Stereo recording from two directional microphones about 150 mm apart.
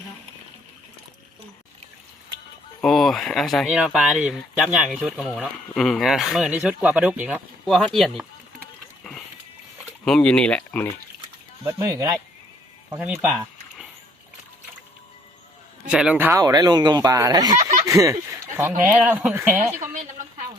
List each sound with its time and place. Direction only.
2.8 s speech: centre (ahead or behind)
9.0 s vehicle: centre (ahead or behind)
10.1 s speech: 5° left (ahead or behind)
11.6 s speech: 20° right (ahead or behind)
15.9 s speech: 5° right (ahead or behind)
16.4 s speech: 25° right (ahead or behind)
17.5 s a sound: 50° right (ahead or behind)
17.8 s speech: 20° right (ahead or behind)
19.8 s a sound: 55° right (ahead or behind)